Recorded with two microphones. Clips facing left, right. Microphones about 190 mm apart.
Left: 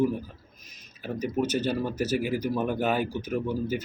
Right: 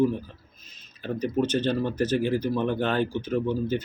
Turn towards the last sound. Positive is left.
turn(degrees=10)  # may be behind; listen again after turning